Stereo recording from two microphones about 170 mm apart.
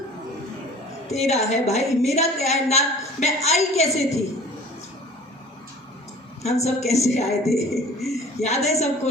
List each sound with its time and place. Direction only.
1.0 s a woman's voice: 40° left (ahead or behind)
6.4 s a woman's voice: 40° left (ahead or behind)
7.7 s a man's voice: centre (ahead or behind)
8.1 s a woman's voice: 40° left (ahead or behind)